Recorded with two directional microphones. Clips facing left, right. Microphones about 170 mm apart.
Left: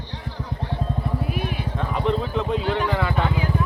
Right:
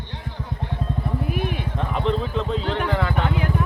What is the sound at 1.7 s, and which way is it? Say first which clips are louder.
Speech: left 1 dB; centre (ahead or behind).